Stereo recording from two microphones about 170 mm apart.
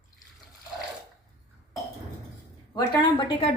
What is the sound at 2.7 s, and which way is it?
Speech, 25° left (ahead or behind).